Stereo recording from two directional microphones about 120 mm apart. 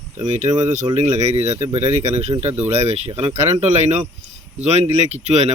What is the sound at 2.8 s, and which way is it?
Speech, 60° right (ahead or behind).